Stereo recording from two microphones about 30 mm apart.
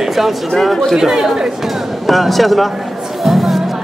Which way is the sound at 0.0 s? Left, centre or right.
Centre.